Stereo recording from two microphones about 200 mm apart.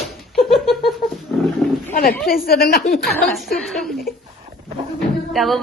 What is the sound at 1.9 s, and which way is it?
Speech, 45° left (ahead or behind).